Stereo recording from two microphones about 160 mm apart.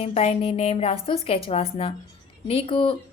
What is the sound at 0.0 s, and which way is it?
A woman's voice, 40° left (ahead or behind).